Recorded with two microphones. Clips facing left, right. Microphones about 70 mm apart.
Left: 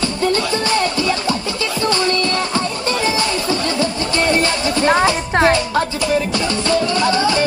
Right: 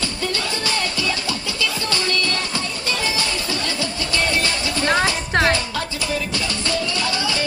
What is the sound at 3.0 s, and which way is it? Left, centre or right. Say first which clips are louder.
Music: left 6 dB; left.